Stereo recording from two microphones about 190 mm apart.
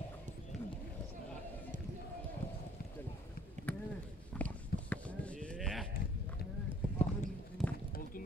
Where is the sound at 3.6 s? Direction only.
40° right (ahead or behind).